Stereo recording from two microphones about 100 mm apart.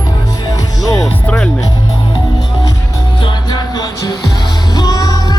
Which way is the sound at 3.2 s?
45° left (ahead or behind).